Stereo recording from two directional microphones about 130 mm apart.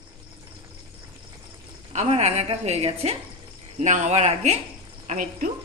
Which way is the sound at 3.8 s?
65° right (ahead or behind).